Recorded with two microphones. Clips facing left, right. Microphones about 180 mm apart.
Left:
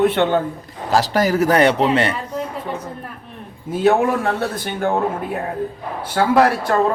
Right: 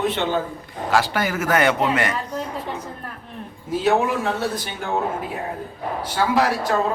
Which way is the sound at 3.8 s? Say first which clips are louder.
Left 4 dB; 55° left (ahead or behind).